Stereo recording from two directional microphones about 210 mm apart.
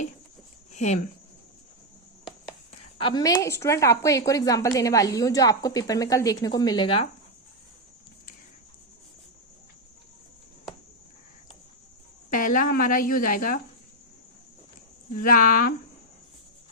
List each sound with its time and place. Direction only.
0.7 s speech: 35° left (ahead or behind)
3.0 s a woman's voice: 20° left (ahead or behind)
12.3 s speech: 40° left (ahead or behind)
15.2 s speech: 40° left (ahead or behind)